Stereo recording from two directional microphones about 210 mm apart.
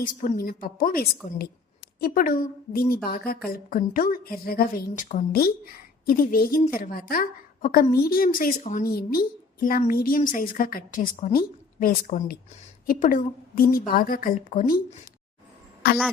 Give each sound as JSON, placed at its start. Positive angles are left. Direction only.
{"t": 0.0, "sound": "a woman's voice", "side_deg": 40}
{"t": 15.8, "sound": "a woman's voice", "side_deg": 45}